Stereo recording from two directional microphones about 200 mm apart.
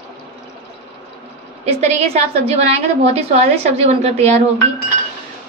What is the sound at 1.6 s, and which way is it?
A woman's voice, 35° right (ahead or behind).